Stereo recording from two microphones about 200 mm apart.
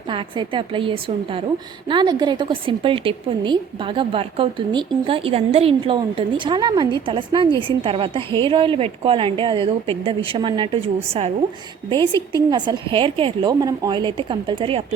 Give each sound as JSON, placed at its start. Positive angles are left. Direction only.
{"t": 0.1, "sound": "a woman's voice", "side_deg": -25}